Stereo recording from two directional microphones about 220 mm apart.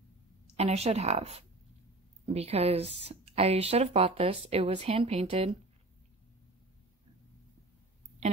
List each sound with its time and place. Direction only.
0.6 s speech: 30° right (ahead or behind)